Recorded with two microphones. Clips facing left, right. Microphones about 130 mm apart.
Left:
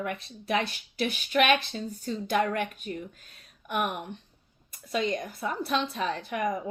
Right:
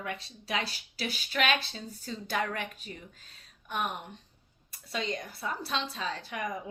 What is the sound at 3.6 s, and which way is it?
Speech, 65° left (ahead or behind).